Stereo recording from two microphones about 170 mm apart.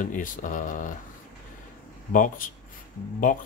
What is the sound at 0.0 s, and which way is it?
Speech, 50° left (ahead or behind).